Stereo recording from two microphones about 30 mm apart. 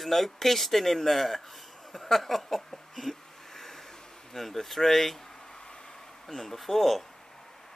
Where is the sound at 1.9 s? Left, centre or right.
Centre.